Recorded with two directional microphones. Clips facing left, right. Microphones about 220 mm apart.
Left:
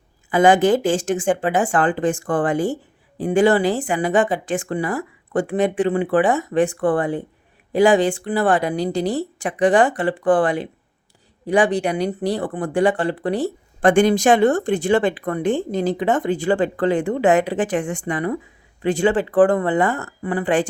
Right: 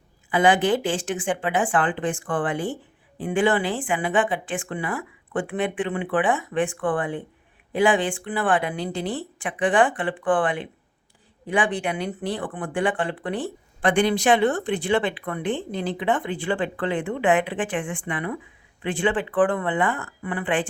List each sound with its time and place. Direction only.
0.3 s speech: 45° left (ahead or behind)